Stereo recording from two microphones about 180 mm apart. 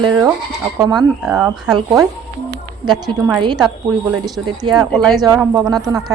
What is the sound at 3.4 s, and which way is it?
A woman's voice, 25° right (ahead or behind).